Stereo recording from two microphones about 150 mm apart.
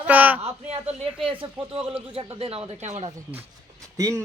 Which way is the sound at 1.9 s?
10° right (ahead or behind).